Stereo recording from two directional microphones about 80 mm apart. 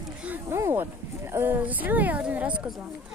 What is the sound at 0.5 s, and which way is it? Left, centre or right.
Speech, right.